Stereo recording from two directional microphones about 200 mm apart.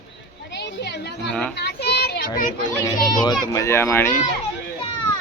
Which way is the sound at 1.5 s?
55° left (ahead or behind).